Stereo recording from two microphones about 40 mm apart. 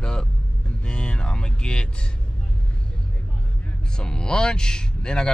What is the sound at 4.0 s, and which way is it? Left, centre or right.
Speech, centre.